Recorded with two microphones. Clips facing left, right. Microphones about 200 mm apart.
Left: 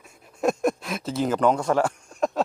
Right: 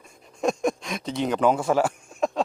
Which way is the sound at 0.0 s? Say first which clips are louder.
Left 1 dB; 5° left (ahead or behind).